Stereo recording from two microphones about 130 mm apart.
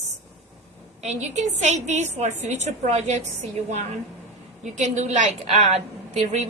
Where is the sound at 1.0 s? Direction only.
60° right (ahead or behind).